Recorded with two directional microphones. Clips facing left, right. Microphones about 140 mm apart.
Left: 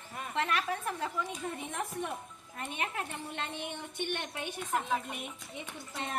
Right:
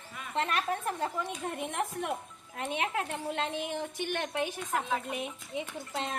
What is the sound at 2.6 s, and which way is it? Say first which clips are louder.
A woman's voice: right 5 dB; 90° right.